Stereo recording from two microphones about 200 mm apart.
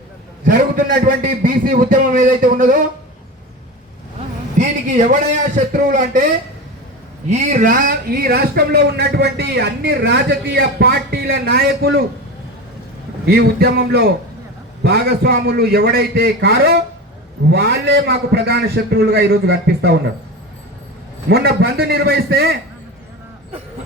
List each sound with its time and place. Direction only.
0.4 s a man's voice: 45° right (ahead or behind)
4.6 s a sound: 35° right (ahead or behind)
5.7 s speech: 40° right (ahead or behind)
7.3 s a man's voice: 35° right (ahead or behind); by 12.0 s 50° right (ahead or behind)
13.2 s a man's voice: 55° right (ahead or behind)
21.2 s a man's voice: 55° right (ahead or behind)